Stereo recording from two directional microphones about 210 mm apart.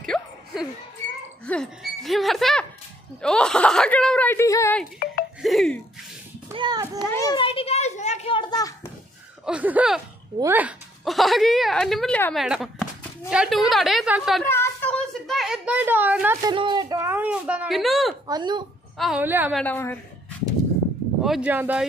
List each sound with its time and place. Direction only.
0.1 s music: 5° left (ahead or behind)
1.4 s a woman's voice: 5° left (ahead or behind)
4.9 s a sound: 45° left (ahead or behind)
5.4 s a woman's voice: centre (ahead or behind)
6.5 s a child's voice: 20° right (ahead or behind)
7.1 s a child's voice: 15° left (ahead or behind)
9.5 s a woman's voice: 5° right (ahead or behind)
14.4 s a sound: 10° left (ahead or behind); by 16.3 s 10° right (ahead or behind)
16.4 s speech: 20° right (ahead or behind); by 18.1 s centre (ahead or behind)
18.2 s a child's voice: 20° right (ahead or behind)
18.9 s speech: 5° right (ahead or behind)
19.5 s a woman's voice: 10° left (ahead or behind)
21.2 s a woman's voice: 5° right (ahead or behind)